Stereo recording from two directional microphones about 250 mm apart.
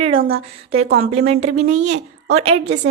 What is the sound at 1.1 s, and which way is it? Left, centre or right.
Speech, right.